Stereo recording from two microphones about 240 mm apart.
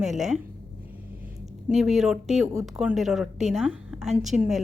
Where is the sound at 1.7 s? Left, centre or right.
Centre.